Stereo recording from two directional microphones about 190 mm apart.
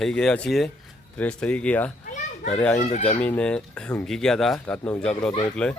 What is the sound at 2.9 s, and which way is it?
Speech, 35° left (ahead or behind).